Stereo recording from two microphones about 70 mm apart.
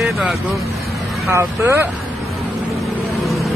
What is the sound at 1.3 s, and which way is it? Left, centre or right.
Speech, right.